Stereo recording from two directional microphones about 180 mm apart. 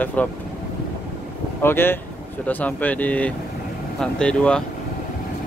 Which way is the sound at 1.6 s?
10° left (ahead or behind).